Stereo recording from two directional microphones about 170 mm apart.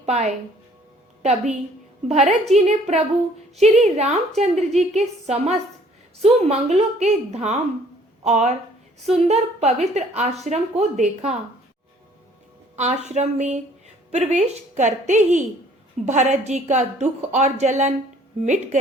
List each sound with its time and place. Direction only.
0.0 s a woman's voice: 40° right (ahead or behind)
12.7 s speech: 45° right (ahead or behind)